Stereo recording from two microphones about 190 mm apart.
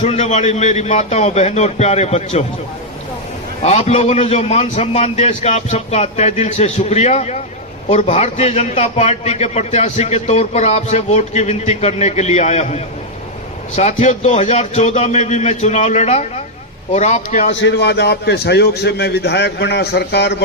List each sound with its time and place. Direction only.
0.0 s a man's voice: 40° left (ahead or behind)
3.6 s a man's voice: 35° left (ahead or behind)
17.6 s a man's voice: 65° left (ahead or behind)